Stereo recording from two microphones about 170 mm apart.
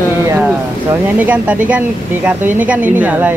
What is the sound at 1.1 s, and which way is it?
Speech, 10° right (ahead or behind).